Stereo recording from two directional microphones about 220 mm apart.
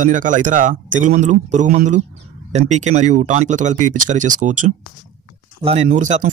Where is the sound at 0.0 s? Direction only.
35° right (ahead or behind).